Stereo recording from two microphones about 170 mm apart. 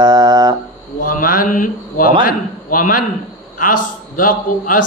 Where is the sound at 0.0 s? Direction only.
25° right (ahead or behind).